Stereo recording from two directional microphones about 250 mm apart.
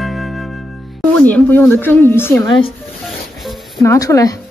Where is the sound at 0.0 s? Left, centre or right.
Centre.